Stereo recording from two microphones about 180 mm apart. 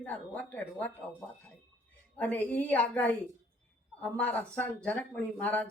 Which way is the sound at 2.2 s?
10° left (ahead or behind).